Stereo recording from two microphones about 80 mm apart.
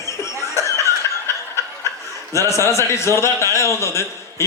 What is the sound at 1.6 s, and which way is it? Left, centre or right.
Snicker, left.